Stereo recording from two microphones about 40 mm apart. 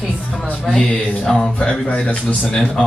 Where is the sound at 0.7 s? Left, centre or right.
Centre.